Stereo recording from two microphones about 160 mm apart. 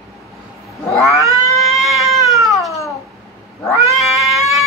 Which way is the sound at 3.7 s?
Centre (ahead or behind).